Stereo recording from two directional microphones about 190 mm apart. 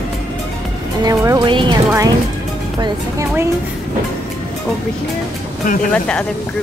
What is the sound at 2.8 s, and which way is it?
Speech, 15° right (ahead or behind).